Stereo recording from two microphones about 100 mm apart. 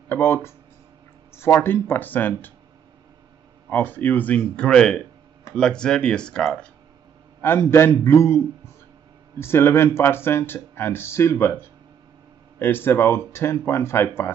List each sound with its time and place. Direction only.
0.1 s speech: 25° left (ahead or behind)
3.7 s speech: 20° left (ahead or behind)
7.7 s speech: 25° left (ahead or behind)
9.4 s speech: 25° left (ahead or behind)
12.5 s speech: 20° left (ahead or behind)